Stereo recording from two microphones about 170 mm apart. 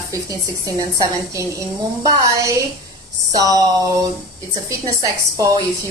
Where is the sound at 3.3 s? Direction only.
20° right (ahead or behind).